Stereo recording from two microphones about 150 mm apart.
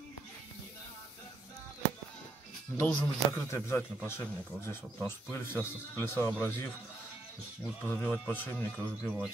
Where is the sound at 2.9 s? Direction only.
10° left (ahead or behind).